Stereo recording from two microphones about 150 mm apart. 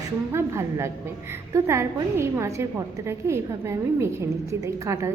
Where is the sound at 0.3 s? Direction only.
20° right (ahead or behind).